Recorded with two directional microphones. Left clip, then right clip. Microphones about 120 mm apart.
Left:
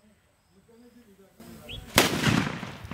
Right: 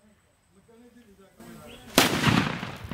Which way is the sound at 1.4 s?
30° right (ahead or behind).